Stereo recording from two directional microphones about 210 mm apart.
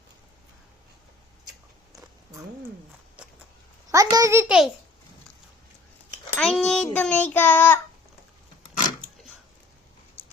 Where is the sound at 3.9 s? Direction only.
15° right (ahead or behind).